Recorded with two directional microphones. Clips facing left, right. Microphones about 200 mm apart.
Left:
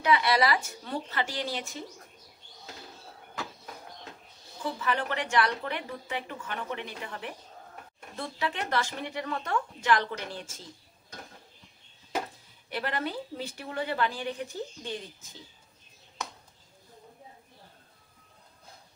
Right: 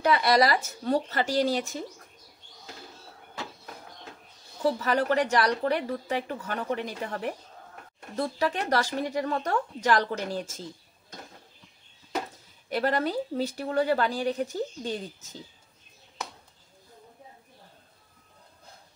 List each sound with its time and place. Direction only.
0.0 s a woman's voice: 40° right (ahead or behind)
4.7 s a woman's voice: 40° right (ahead or behind)
12.6 s a woman's voice: 40° right (ahead or behind)